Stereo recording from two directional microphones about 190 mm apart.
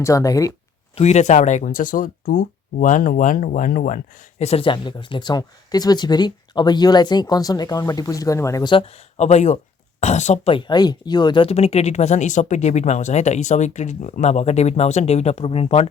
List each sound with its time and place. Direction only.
0.0 s speech: 15° left (ahead or behind)
0.9 s speech: 35° left (ahead or behind)